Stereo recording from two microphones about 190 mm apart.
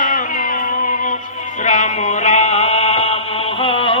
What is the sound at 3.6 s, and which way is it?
Music, 30° left (ahead or behind).